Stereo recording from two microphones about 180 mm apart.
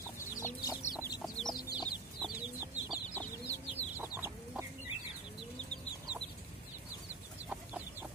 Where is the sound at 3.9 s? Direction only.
10° right (ahead or behind).